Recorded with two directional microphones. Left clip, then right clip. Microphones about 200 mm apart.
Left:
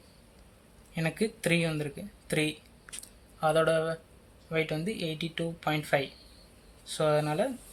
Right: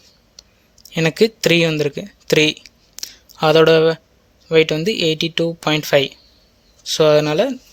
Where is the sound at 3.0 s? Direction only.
45° right (ahead or behind).